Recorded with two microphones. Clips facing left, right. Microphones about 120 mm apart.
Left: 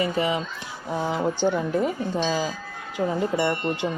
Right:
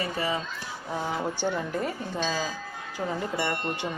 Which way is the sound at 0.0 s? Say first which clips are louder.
Left 5 dB; 20° left (ahead or behind).